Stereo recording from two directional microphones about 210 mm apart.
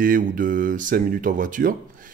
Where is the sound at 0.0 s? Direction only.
40° right (ahead or behind).